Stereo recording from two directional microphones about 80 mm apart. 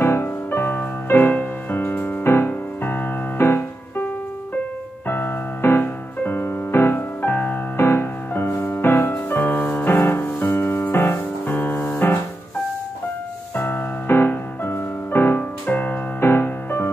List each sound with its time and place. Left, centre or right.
0.0 s music: left
13.6 s music: left